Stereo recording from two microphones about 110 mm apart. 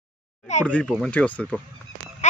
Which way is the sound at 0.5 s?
90° left.